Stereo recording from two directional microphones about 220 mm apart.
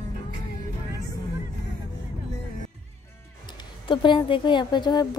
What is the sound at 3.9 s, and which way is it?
A woman's voice, 20° left (ahead or behind).